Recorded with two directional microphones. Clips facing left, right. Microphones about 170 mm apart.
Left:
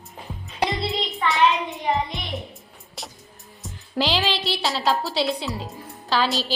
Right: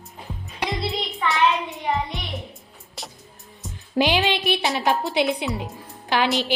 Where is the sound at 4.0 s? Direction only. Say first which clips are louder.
Right 3 dB; 20° right (ahead or behind).